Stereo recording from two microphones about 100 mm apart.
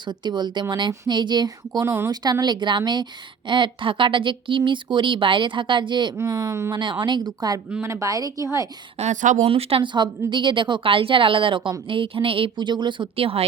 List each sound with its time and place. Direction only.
0.0 s a woman's voice: 50° right (ahead or behind)
6.1 s speech: 35° right (ahead or behind)
6.7 s a woman's voice: 50° right (ahead or behind)
7.8 s speech: 25° right (ahead or behind)
9.0 s a woman's voice: 90° right
9.5 s speech: 75° right (ahead or behind)
9.8 s a woman's voice: 50° right (ahead or behind); by 13.4 s 70° right (ahead or behind)